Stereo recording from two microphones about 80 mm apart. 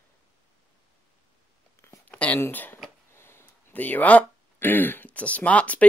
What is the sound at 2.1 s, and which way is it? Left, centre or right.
Speech, centre.